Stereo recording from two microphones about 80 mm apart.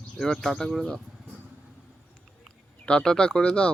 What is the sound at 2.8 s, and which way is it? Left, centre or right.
Speech, centre.